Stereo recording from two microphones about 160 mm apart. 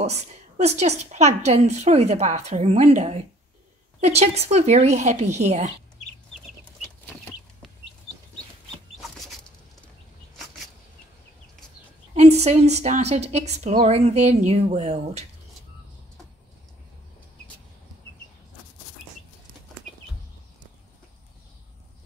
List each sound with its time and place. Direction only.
0.6 s a woman's voice: 45° right (ahead or behind)
12.2 s a woman's voice: 40° right (ahead or behind)